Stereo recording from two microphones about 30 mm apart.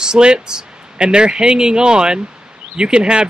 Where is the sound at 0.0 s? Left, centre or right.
Right.